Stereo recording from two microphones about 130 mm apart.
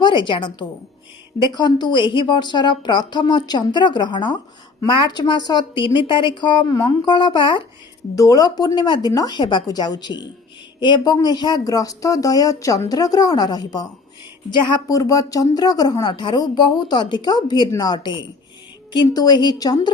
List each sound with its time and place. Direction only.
0.0 s a woman's voice: 35° left (ahead or behind)
1.5 s a woman's voice: 35° left (ahead or behind)
8.1 s a woman's voice: 25° left (ahead or behind)